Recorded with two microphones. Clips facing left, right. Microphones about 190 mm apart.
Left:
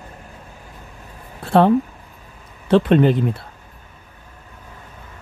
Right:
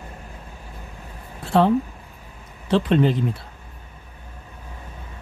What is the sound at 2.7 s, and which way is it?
Speech, 55° left (ahead or behind).